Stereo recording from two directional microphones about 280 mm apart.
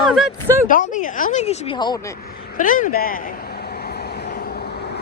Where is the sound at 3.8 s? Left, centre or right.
Left.